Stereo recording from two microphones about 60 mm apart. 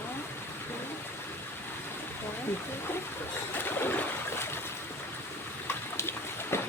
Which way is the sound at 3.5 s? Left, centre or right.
Left.